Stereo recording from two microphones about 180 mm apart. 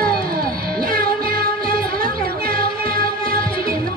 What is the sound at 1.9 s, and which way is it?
Music, 55° right (ahead or behind).